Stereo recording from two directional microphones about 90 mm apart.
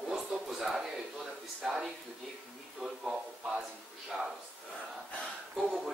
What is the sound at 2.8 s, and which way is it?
A man's voice, 5° right (ahead or behind).